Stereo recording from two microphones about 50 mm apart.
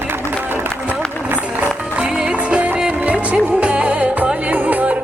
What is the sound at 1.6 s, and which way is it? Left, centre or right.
Music, right.